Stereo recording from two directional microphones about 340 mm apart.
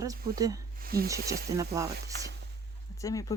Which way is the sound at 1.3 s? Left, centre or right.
Centre.